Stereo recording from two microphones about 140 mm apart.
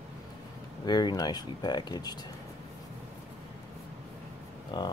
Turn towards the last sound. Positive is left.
turn(degrees=30)  # may be behind; listen again after turning